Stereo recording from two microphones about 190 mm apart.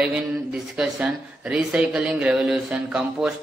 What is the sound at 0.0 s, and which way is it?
Speech, 5° right (ahead or behind).